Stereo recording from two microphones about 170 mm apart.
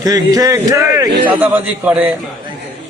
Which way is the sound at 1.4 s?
10° right (ahead or behind).